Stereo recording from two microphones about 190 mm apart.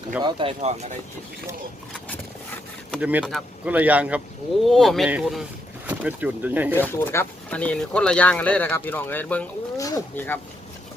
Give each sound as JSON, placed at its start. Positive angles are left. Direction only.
{"t": 0.2, "sound": "speech", "side_deg": -25}
{"t": 3.0, "sound": "speech", "side_deg": -10}
{"t": 6.7, "sound": "speech", "side_deg": 15}